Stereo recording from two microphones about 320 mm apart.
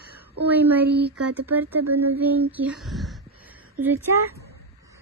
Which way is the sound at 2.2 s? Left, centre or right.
Centre.